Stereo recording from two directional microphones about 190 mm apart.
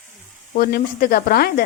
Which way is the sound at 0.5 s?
50° left (ahead or behind).